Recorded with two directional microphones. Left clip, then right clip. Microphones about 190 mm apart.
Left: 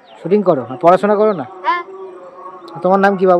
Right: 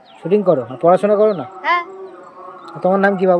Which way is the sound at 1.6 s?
Centre (ahead or behind).